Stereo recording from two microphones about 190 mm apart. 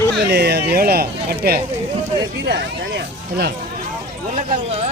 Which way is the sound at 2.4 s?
65° right (ahead or behind).